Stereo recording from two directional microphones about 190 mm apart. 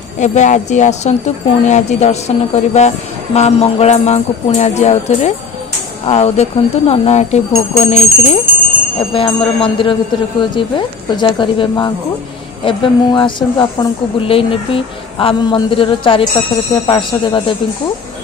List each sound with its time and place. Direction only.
0.2 s speech: 40° left (ahead or behind)